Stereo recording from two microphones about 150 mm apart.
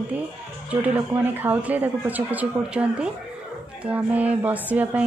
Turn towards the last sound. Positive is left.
turn(degrees=-10)  # may be behind; listen again after turning